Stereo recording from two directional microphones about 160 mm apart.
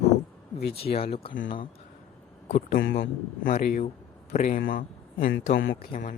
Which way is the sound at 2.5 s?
50° left (ahead or behind).